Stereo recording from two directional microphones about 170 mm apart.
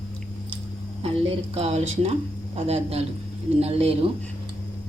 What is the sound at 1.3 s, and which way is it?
Speech, 35° right (ahead or behind).